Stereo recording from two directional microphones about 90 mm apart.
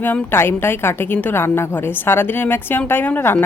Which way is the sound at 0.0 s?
25° left (ahead or behind).